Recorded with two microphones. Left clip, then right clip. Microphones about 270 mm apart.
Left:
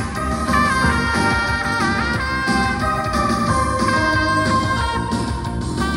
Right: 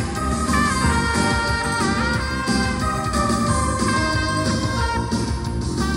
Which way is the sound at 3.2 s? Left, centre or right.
Centre.